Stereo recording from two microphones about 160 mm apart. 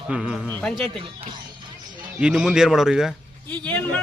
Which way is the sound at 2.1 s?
5° right (ahead or behind).